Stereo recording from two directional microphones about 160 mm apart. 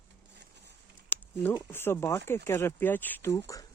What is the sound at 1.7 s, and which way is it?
Speech, 15° left (ahead or behind).